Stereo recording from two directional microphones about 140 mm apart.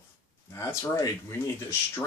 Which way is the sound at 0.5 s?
20° left (ahead or behind).